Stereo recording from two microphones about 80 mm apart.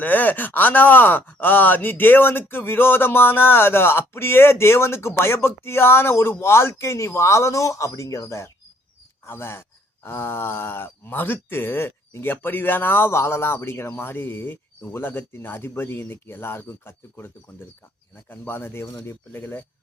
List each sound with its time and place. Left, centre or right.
0.0 s speech: left
9.2 s speech: left